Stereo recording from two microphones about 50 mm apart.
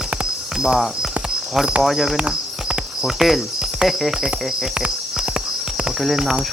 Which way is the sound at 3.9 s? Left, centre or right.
Centre.